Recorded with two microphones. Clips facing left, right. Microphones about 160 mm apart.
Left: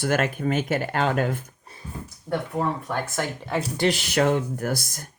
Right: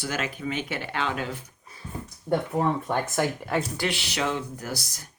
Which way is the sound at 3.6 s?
30° left (ahead or behind).